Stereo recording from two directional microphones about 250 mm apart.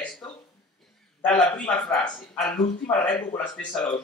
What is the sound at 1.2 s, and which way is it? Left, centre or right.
Speech, centre.